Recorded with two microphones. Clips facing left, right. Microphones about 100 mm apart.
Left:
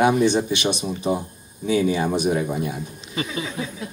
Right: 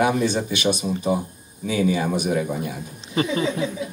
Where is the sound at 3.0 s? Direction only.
35° right (ahead or behind).